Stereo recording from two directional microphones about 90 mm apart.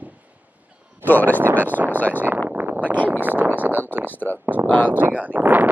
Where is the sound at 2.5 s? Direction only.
20° right (ahead or behind).